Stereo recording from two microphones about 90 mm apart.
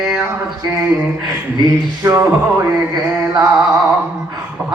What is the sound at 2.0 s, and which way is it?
Speech, 35° right (ahead or behind).